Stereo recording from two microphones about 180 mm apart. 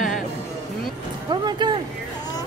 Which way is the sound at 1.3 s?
25° right (ahead or behind).